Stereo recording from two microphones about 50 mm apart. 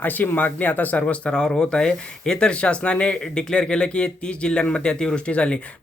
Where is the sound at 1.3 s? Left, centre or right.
Centre.